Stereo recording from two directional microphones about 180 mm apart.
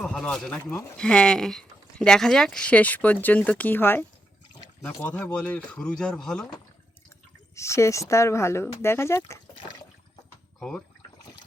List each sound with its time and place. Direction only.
0.0 s speech: 5° left (ahead or behind)
7.5 s speech: 15° left (ahead or behind)
10.6 s speech: 5° left (ahead or behind)